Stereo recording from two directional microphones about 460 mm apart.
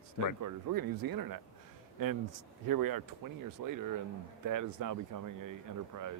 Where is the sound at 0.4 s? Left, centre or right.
Right.